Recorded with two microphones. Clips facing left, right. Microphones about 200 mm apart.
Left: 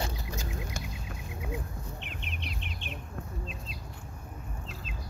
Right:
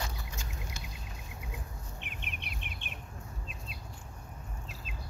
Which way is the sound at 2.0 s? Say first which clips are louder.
Left 4 dB; 55° right (ahead or behind).